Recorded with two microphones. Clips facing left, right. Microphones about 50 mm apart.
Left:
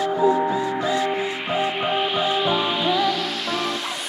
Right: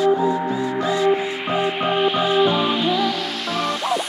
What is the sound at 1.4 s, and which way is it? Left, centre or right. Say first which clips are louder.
Music: right 2 dB; centre.